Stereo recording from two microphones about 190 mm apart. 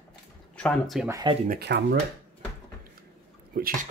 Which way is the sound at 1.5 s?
60° right (ahead or behind).